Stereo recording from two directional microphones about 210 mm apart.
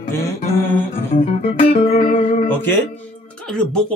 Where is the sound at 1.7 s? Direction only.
25° left (ahead or behind).